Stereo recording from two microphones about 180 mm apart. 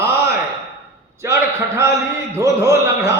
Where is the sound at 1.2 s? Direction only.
15° right (ahead or behind).